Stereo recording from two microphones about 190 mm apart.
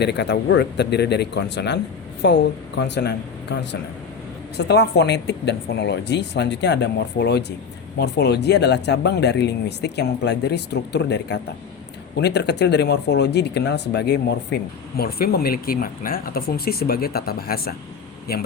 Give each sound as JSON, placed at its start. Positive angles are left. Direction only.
{"t": 0.0, "sound": "speech", "side_deg": 65}